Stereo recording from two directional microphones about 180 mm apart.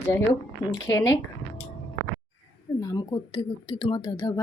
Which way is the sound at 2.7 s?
15° left (ahead or behind).